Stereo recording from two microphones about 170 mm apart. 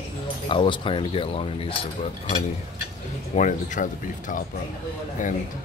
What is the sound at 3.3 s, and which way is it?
Speech, 45° left (ahead or behind).